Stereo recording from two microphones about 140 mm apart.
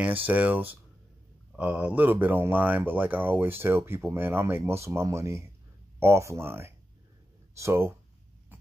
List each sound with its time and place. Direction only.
0.0 s speech: 10° right (ahead or behind)